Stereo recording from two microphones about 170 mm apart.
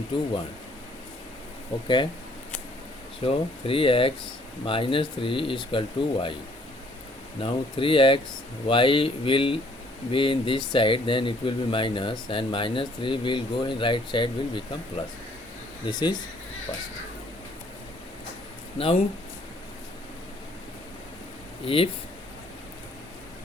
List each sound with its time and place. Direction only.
1.7 s speech: 30° left (ahead or behind)
3.2 s speech: 35° left (ahead or behind)
7.4 s speech: 30° left (ahead or behind)
18.8 s speech: 35° left (ahead or behind)
21.6 s speech: 35° left (ahead or behind)